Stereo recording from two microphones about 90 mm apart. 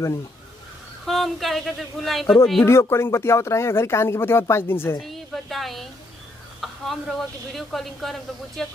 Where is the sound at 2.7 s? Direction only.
30° left (ahead or behind).